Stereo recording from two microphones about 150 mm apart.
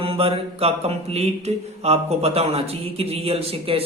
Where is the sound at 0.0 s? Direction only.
40° right (ahead or behind).